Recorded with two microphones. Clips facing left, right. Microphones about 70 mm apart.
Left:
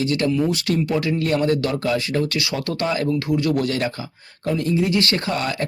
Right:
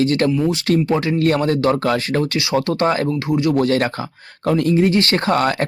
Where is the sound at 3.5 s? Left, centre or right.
Right.